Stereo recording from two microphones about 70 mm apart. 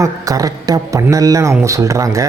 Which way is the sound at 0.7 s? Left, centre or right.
Right.